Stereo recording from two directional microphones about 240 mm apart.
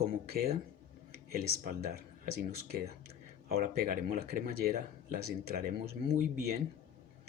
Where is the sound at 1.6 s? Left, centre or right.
Right.